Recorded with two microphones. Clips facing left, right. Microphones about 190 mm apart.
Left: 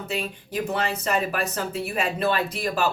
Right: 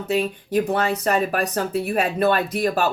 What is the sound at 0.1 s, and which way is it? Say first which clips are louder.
Speech: right 10 dB; 40° right (ahead or behind).